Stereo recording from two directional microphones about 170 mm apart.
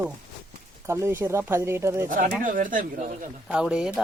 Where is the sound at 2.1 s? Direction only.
50° right (ahead or behind).